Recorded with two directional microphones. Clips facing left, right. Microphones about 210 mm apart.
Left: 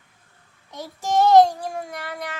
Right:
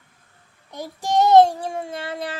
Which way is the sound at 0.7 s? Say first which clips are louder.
Right 1 dB; 15° right (ahead or behind).